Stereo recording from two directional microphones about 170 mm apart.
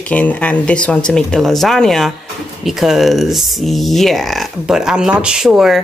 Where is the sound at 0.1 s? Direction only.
10° left (ahead or behind).